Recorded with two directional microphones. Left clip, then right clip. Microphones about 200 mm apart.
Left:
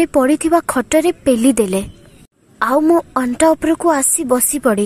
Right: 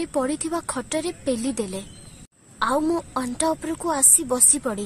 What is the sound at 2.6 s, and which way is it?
A woman's voice, 35° left (ahead or behind).